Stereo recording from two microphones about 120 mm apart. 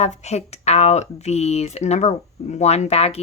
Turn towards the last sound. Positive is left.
turn(degrees=60)  # may be behind; listen again after turning